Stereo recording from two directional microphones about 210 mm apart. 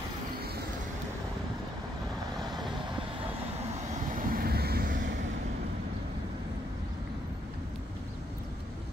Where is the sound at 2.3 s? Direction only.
20° right (ahead or behind).